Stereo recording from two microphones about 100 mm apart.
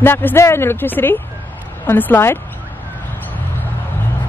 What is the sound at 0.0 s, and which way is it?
Speech, 20° left (ahead or behind).